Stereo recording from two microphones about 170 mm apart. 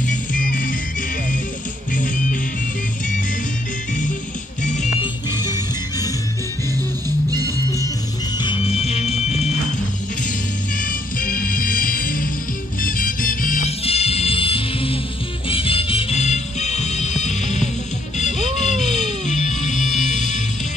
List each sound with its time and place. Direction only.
0.0 s music: 50° left (ahead or behind)
5.4 s music: 20° left (ahead or behind)
7.2 s music: 20° right (ahead or behind)
8.4 s music: 30° left (ahead or behind)
10.8 s music: 55° left (ahead or behind)
13.7 s music: 35° left (ahead or behind)